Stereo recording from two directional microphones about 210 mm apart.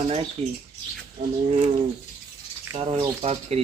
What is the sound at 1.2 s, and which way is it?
Bird, 35° right (ahead or behind).